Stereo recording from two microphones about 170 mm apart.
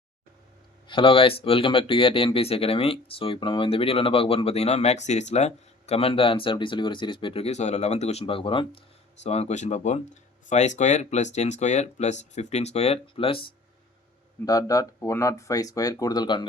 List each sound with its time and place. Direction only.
0.9 s speech: 30° left (ahead or behind)
14.4 s speech: 20° left (ahead or behind)